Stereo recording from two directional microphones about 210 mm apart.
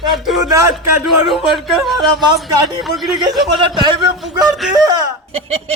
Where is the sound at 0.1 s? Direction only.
Centre (ahead or behind).